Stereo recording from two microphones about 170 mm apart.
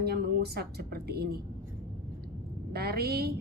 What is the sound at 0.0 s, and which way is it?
A woman's voice, 65° right (ahead or behind).